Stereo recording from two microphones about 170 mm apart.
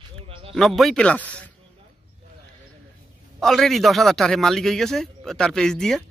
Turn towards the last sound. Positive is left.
turn(degrees=5)  # may be behind; listen again after turning